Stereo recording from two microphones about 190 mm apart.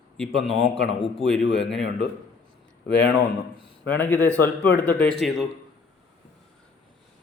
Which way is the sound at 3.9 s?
10° left (ahead or behind).